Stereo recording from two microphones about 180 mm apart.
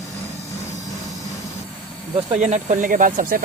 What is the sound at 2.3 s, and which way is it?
Speech, 40° right (ahead or behind).